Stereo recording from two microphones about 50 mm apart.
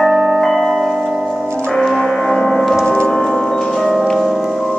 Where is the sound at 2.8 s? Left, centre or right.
Centre.